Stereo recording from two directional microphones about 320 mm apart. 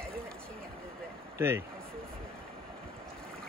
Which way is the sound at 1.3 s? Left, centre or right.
Centre.